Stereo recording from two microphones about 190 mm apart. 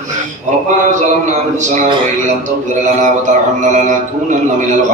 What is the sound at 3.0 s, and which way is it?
Speech, 40° right (ahead or behind).